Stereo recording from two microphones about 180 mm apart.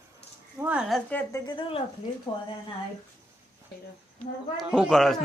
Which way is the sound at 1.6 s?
30° left (ahead or behind).